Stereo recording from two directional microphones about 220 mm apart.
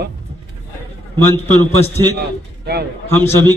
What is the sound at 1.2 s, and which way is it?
Speech, 10° left (ahead or behind).